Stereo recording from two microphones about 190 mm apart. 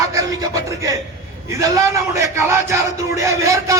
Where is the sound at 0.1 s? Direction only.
15° right (ahead or behind).